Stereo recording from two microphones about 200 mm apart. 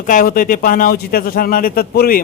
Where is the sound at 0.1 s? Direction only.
45° left (ahead or behind).